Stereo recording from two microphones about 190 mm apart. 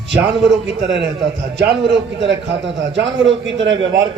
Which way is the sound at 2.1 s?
70° right (ahead or behind).